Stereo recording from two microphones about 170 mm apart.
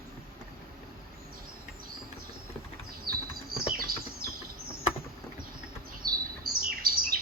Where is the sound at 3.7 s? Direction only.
60° right (ahead or behind).